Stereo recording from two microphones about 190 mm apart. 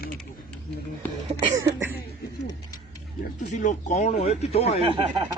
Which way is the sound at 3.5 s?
40° left (ahead or behind).